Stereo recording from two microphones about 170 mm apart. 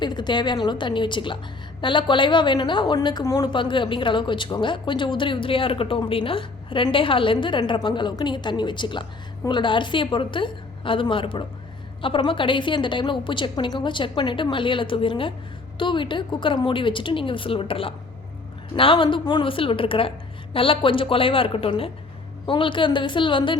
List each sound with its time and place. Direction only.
0.0 s a woman's voice: 25° left (ahead or behind)